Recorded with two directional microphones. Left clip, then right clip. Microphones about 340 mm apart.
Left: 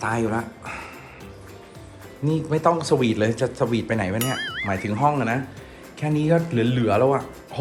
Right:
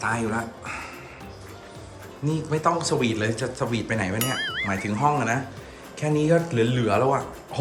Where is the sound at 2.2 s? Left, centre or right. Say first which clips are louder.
Left 3 dB; centre.